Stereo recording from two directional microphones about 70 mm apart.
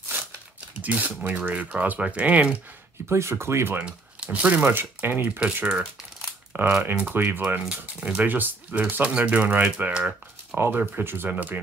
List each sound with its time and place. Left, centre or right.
0.7 s speech: right
3.1 s speech: right
3.7 s speech: centre